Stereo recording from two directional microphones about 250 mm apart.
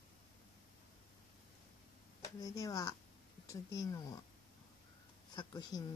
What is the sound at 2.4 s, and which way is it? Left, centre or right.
Speech, centre.